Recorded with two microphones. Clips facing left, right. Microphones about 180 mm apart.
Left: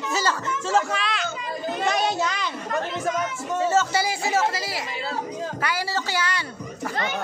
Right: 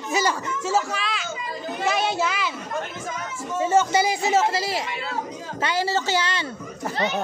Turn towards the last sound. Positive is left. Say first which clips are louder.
# right 3 dB
turn(degrees=-25)  # may be behind; listen again after turning